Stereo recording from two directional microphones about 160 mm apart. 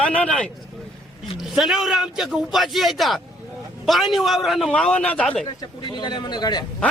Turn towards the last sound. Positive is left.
turn(degrees=25)  # may be behind; listen again after turning